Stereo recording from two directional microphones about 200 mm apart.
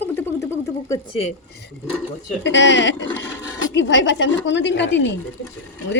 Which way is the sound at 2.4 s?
65° left (ahead or behind).